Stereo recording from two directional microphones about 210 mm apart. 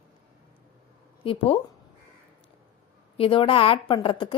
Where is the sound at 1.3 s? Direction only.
25° left (ahead or behind).